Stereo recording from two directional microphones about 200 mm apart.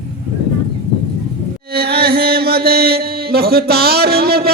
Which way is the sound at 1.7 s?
50° right (ahead or behind).